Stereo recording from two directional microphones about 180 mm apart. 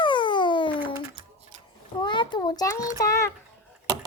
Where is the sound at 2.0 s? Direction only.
25° left (ahead or behind).